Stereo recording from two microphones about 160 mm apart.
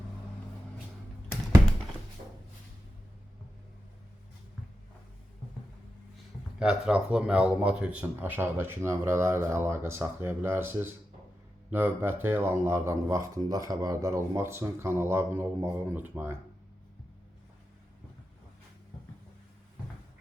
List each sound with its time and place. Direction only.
6.6 s speech: 5° right (ahead or behind)